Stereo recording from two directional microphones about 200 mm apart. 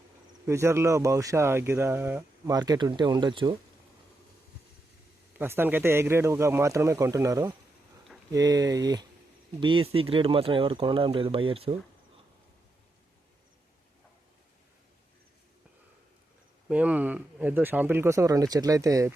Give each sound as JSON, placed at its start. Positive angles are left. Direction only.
{"t": 0.4, "sound": "speech", "side_deg": -15}
{"t": 5.4, "sound": "speech", "side_deg": -10}
{"t": 16.6, "sound": "speech", "side_deg": -5}